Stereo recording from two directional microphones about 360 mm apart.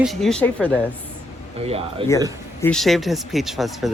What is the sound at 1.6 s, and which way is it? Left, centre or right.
Speech, centre.